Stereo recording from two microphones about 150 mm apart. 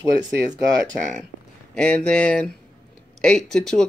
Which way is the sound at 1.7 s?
10° left (ahead or behind).